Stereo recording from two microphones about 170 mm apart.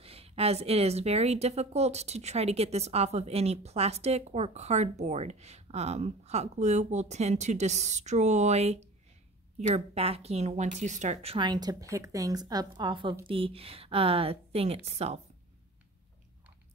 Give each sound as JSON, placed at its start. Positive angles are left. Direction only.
{"t": 0.0, "sound": "a woman's voice", "side_deg": -35}
{"t": 11.3, "sound": "a woman's voice", "side_deg": -25}